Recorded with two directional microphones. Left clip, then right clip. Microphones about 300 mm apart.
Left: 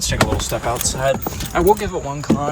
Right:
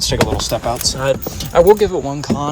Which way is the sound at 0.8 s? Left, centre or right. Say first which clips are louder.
Right 2 dB; centre.